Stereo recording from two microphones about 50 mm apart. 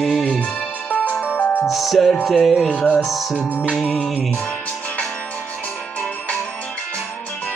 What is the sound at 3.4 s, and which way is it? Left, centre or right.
Music, left.